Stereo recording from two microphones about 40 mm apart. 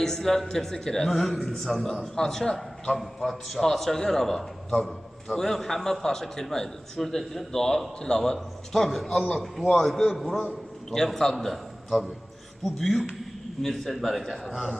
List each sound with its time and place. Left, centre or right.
0.0 s a man's voice: centre
3.0 s a man's voice: centre